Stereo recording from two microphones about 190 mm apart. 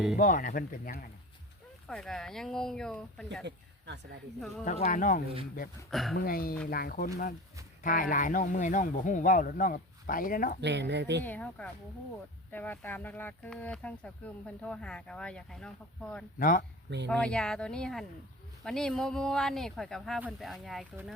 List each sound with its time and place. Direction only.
0.2 s speech: 45° left (ahead or behind)
1.9 s speech: centre (ahead or behind)
3.4 s speech: 65° right (ahead or behind)
4.4 s speech: centre (ahead or behind)
4.6 s speech: 40° left (ahead or behind)
5.9 s speech: centre (ahead or behind)
6.1 s speech: 50° left (ahead or behind)
10.6 s speech: 65° right (ahead or behind)
11.2 s speech: 10° left (ahead or behind)
16.4 s speech: 45° left (ahead or behind)
17.1 s speech: 5° left (ahead or behind)